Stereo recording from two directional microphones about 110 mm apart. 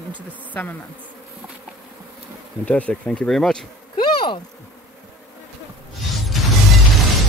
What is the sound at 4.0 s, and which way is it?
Insect, 45° left (ahead or behind).